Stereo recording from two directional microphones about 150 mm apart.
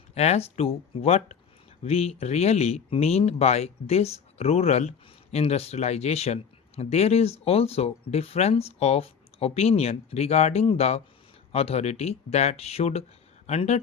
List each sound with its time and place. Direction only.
0.1 s speech: 45° left (ahead or behind)